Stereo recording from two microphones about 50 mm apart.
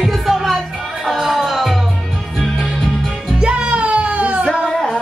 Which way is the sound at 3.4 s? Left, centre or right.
Centre.